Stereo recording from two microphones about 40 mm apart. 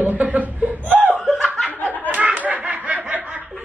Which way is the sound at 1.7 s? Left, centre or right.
Right.